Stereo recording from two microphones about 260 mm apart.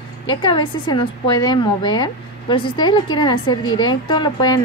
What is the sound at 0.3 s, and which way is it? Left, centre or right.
A woman's voice, centre.